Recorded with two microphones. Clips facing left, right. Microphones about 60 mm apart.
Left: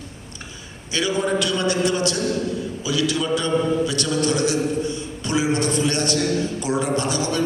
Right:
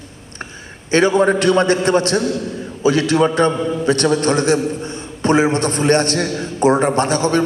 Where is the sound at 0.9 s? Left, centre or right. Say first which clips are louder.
Right 9 dB; right.